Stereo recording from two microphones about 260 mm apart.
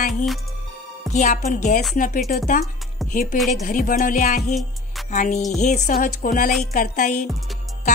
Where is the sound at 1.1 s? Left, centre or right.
Left.